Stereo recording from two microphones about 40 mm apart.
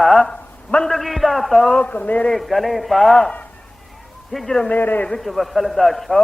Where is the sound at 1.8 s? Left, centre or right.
Left.